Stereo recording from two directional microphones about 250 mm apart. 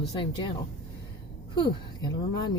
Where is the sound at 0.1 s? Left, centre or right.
Centre.